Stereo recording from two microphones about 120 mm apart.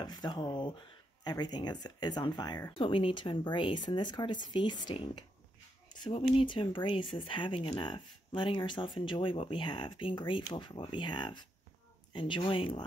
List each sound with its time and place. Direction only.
0.0 s speech: 35° left (ahead or behind)